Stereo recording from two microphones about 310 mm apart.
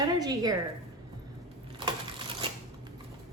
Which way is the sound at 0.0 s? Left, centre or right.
Centre.